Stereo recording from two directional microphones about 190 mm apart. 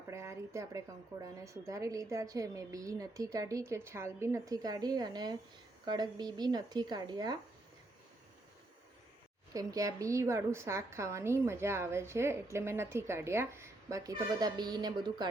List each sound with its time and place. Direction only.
0.1 s a woman's voice: 15° right (ahead or behind)
9.5 s a woman's voice: 20° right (ahead or behind)